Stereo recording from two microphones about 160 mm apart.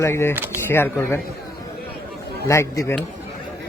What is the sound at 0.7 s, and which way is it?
Speech, 15° left (ahead or behind).